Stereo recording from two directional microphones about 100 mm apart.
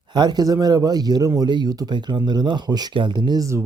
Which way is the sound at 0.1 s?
45° right (ahead or behind).